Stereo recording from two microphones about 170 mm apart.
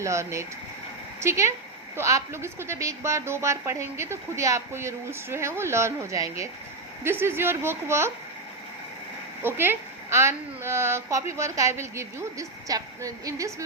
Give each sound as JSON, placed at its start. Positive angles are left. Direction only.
{"t": 0.0, "sound": "a woman's voice", "side_deg": -15}
{"t": 9.4, "sound": "a woman's voice", "side_deg": -15}